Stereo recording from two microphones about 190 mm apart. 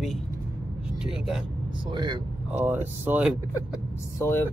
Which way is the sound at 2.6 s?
10° right (ahead or behind).